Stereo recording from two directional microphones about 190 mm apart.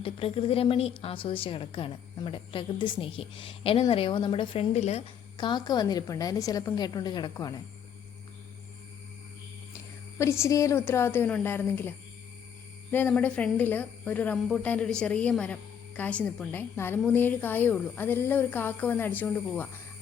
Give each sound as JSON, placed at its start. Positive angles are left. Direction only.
{"t": 0.0, "sound": "a woman's voice", "side_deg": 30}
{"t": 5.4, "sound": "a woman's voice", "side_deg": 25}
{"t": 10.2, "sound": "a woman's voice", "side_deg": 15}